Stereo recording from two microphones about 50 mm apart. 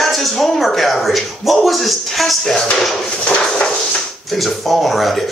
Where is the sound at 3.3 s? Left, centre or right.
Centre.